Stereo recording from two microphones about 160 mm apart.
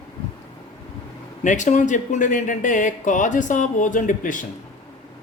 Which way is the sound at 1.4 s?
50° left (ahead or behind).